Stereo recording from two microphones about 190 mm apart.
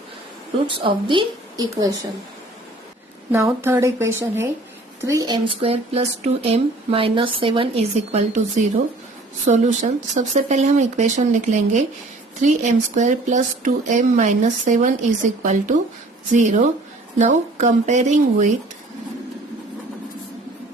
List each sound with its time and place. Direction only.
0.7 s speech: 25° right (ahead or behind)
3.3 s speech: 15° right (ahead or behind); by 18.4 s 40° right (ahead or behind)